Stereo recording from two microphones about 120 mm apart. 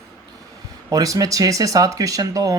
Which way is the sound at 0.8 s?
30° right (ahead or behind).